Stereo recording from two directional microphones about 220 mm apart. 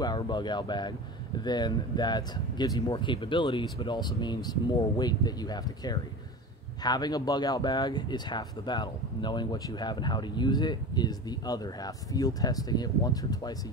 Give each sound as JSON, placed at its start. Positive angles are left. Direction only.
{"t": 0.0, "sound": "speech", "side_deg": 20}